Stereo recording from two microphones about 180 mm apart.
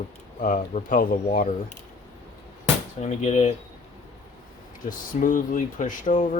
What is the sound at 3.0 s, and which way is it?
Speech, 40° left (ahead or behind).